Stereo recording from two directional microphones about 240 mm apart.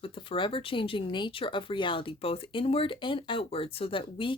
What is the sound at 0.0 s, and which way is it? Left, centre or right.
Speech, left.